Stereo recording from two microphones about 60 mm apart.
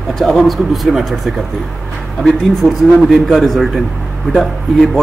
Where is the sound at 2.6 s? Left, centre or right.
Centre.